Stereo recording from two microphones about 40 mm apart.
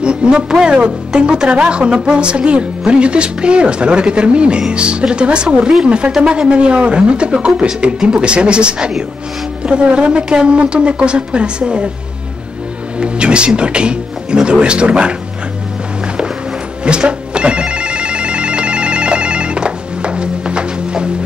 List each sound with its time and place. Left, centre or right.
0.0 s speech: right
13.0 s speech: right
16.8 s telephone: right